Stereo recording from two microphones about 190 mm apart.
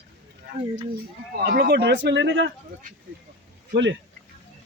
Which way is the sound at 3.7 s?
70° right (ahead or behind).